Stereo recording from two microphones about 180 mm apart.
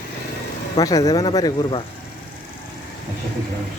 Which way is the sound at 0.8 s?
20° left (ahead or behind).